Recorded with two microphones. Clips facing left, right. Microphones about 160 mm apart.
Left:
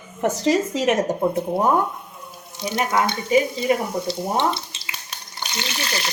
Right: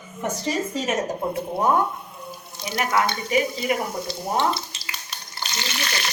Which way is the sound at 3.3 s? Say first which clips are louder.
Left 6 dB; 30° left (ahead or behind).